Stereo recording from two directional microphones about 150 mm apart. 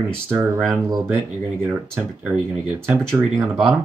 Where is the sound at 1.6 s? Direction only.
15° right (ahead or behind).